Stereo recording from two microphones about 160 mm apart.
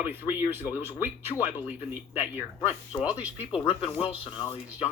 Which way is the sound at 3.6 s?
35° left (ahead or behind).